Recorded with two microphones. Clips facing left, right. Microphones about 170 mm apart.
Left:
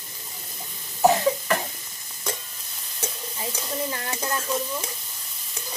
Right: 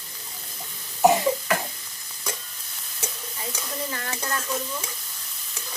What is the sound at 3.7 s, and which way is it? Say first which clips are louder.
Stir: left 3 dB; 25° left (ahead or behind).